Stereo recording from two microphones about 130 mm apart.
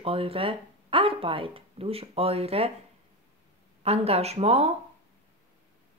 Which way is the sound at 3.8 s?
50° right (ahead or behind).